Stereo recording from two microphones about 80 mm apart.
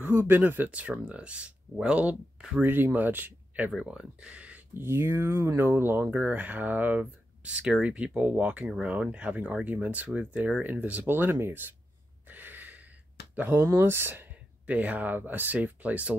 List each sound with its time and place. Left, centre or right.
0.0 s speech: right
2.6 s speech: right
3.7 s speech: centre
4.7 s speech: right
12.3 s a sound: right
13.6 s speech: right